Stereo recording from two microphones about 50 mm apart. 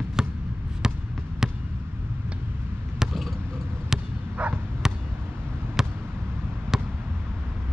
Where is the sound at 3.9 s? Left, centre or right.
Centre.